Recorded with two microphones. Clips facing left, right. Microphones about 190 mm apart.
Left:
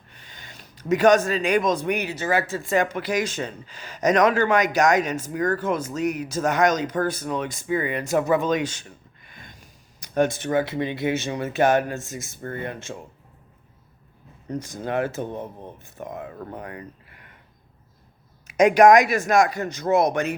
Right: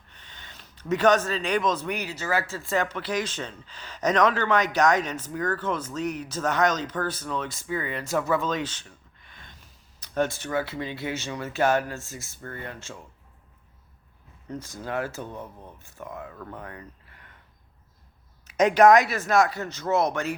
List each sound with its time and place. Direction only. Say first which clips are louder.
0.1 s speech: left 3 dB; 10° left (ahead or behind)
14.4 s speech: left 5 dB; 15° left (ahead or behind)
16.3 s speech: left 4 dB; 35° left (ahead or behind)
16.6 s a sound: left 5 dB; 15° left (ahead or behind)
18.4 s speech: left 3 dB; 10° left (ahead or behind)